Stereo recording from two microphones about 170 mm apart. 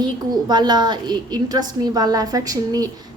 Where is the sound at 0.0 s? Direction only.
25° right (ahead or behind).